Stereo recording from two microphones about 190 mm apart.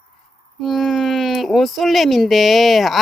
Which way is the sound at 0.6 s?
Centre (ahead or behind).